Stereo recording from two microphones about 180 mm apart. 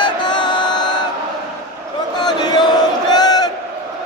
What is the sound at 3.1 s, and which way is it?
Crowd, 20° left (ahead or behind).